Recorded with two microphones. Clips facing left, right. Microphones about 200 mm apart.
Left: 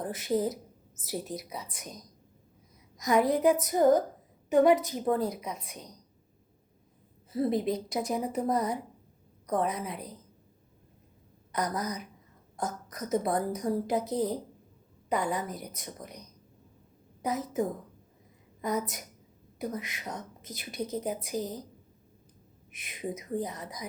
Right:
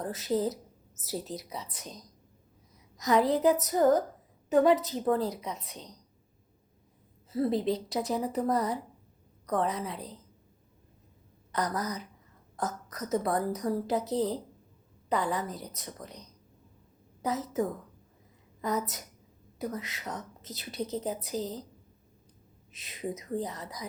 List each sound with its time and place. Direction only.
0.0 s a woman's voice: 15° left (ahead or behind)
7.3 s a woman's voice: 15° left (ahead or behind)
11.5 s a woman's voice: 15° left (ahead or behind)
22.7 s a woman's voice: 15° left (ahead or behind)